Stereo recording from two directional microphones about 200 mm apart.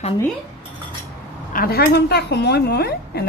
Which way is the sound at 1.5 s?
50° left (ahead or behind).